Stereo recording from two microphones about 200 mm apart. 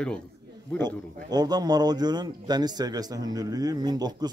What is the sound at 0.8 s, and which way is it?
Speech, 20° right (ahead or behind).